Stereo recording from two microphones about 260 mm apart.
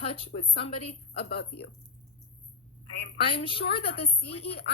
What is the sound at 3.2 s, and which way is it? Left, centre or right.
A woman's voice, centre.